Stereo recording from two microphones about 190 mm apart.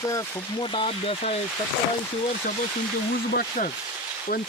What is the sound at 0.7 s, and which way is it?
Speech, 25° left (ahead or behind).